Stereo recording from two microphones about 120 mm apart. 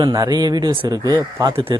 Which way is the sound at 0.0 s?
35° right (ahead or behind).